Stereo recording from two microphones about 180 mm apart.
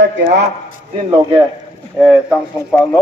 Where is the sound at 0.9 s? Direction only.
30° right (ahead or behind).